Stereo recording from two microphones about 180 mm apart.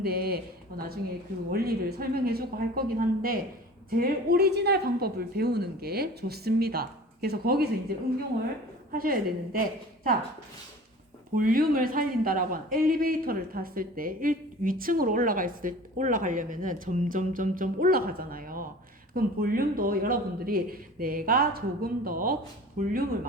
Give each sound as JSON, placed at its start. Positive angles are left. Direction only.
{"t": 0.0, "sound": "speech", "side_deg": -55}
{"t": 8.9, "sound": "speech", "side_deg": -55}
{"t": 11.3, "sound": "speech", "side_deg": -50}